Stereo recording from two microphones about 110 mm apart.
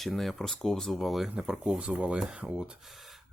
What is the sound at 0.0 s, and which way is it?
Speech, centre (ahead or behind).